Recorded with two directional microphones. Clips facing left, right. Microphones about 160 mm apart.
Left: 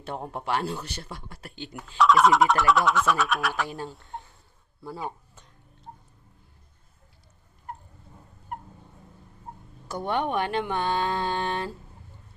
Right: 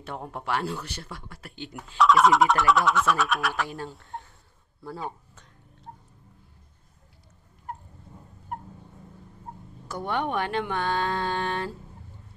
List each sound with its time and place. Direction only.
0.0 s speech: 25° left (ahead or behind)
1.8 s speech: centre (ahead or behind)
3.6 s speech: 20° left (ahead or behind)
3.9 s speech: centre (ahead or behind)
4.8 s speech: 10° left (ahead or behind)
9.8 s speech: 20° left (ahead or behind)